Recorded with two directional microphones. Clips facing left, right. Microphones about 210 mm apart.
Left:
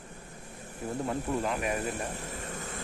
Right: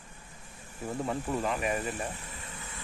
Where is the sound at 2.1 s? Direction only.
40° left (ahead or behind).